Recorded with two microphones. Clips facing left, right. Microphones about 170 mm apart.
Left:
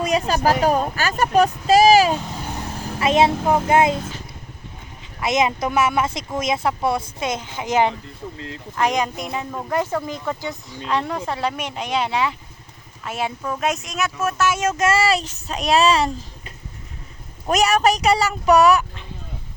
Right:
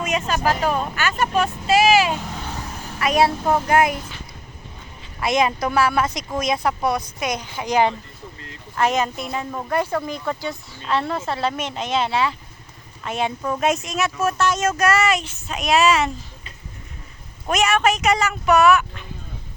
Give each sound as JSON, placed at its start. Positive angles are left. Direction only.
{"t": 0.0, "sound": "speech", "side_deg": 35}
{"t": 2.6, "sound": "speech", "side_deg": 25}
{"t": 5.2, "sound": "speech", "side_deg": 20}
{"t": 9.5, "sound": "speech", "side_deg": 5}
{"t": 9.7, "sound": "speech", "side_deg": 20}
{"t": 13.1, "sound": "speech", "side_deg": 5}
{"t": 14.7, "sound": "speech", "side_deg": 25}
{"t": 17.5, "sound": "speech", "side_deg": 40}